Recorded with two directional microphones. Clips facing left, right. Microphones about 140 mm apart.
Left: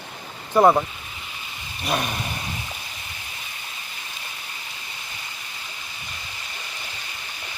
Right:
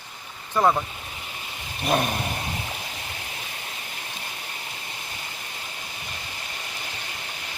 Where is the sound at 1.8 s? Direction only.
40° right (ahead or behind).